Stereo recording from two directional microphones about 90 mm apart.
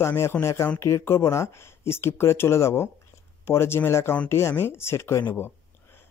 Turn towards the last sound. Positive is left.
turn(degrees=25)  # may be behind; listen again after turning